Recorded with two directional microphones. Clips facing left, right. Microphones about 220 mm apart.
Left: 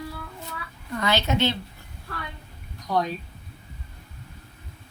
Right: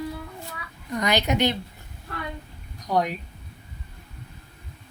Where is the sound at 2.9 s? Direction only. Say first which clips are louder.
Right 1 dB; 15° right (ahead or behind).